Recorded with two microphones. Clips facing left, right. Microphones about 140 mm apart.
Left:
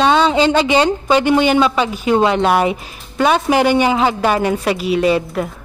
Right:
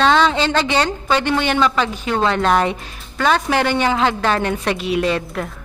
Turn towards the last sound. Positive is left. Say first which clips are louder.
# left 5 dB
turn(degrees=5)  # may be behind; listen again after turning